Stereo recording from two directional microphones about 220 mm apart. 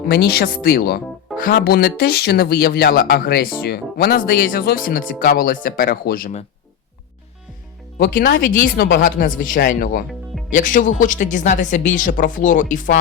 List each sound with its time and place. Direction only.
0.0 s speech: 45° left (ahead or behind)
7.9 s a woman's voice: 40° left (ahead or behind)